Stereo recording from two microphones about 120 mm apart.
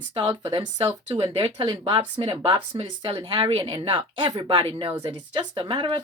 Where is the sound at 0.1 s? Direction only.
45° right (ahead or behind).